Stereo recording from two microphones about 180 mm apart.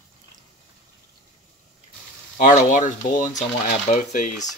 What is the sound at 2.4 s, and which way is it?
Speech, 45° left (ahead or behind).